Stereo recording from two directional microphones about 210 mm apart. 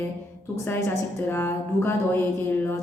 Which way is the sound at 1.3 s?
10° left (ahead or behind).